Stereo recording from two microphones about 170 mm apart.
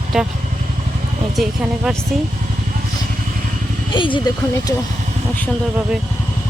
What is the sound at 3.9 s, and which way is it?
Speech, 30° left (ahead or behind).